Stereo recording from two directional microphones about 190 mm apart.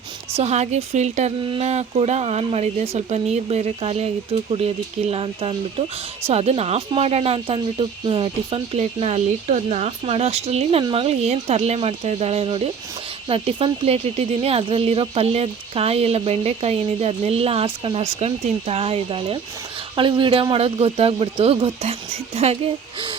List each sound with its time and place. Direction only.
0.3 s speech: 35° right (ahead or behind)